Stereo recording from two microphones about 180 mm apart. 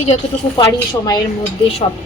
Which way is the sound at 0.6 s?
25° left (ahead or behind).